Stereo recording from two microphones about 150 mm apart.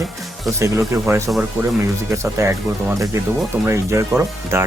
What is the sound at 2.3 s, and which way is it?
Speech, 20° right (ahead or behind).